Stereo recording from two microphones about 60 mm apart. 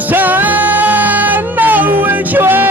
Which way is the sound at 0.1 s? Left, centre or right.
Right.